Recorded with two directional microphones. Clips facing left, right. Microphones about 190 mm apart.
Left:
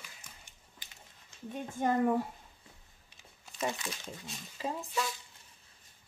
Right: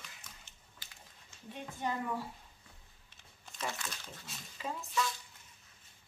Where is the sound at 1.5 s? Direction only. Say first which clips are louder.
Left 7 dB; 50° left (ahead or behind).